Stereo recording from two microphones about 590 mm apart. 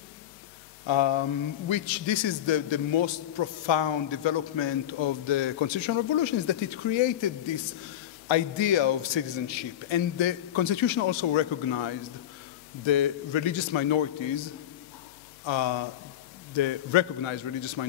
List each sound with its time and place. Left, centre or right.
0.8 s a man's voice: left